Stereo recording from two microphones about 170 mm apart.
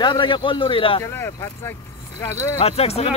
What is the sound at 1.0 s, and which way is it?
Speech, 15° left (ahead or behind).